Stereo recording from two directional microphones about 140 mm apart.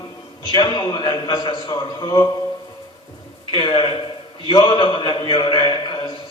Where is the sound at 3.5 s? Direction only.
35° left (ahead or behind).